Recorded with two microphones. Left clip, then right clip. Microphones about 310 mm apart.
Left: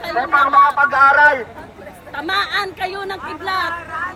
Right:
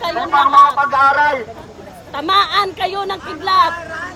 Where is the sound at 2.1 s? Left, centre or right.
Right.